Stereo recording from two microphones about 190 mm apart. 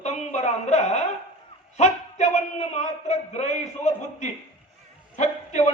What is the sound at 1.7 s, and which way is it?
A man's voice, 35° left (ahead or behind).